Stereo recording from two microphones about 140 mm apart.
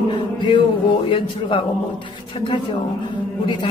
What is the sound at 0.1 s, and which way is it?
Music, 35° left (ahead or behind).